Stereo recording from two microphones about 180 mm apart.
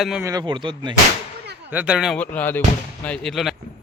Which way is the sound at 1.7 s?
5° right (ahead or behind).